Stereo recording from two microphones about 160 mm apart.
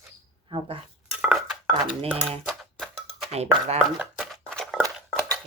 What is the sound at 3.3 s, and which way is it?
Speech, 40° right (ahead or behind).